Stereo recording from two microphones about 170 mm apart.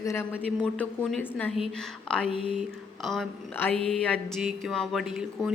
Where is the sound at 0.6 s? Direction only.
5° left (ahead or behind).